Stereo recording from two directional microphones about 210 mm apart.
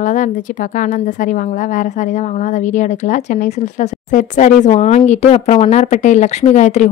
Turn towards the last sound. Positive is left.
turn(degrees=35)  # may be behind; listen again after turning